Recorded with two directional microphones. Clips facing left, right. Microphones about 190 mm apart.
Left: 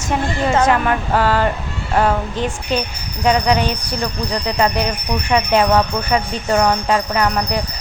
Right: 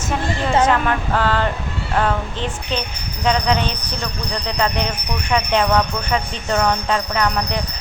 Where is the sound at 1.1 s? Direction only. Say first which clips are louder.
Left 4 dB; 10° left (ahead or behind).